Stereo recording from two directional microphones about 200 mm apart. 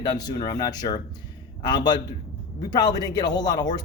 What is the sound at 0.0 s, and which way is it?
A man's voice, 20° left (ahead or behind).